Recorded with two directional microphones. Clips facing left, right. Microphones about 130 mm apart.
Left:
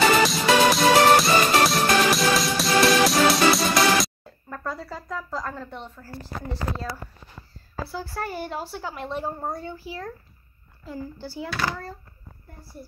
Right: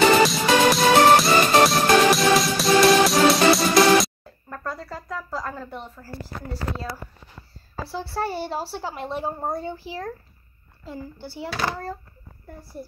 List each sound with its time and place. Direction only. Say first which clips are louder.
0.2 s music: right 1 dB; centre (ahead or behind)
7.9 s speech: right 5 dB; 30° right (ahead or behind)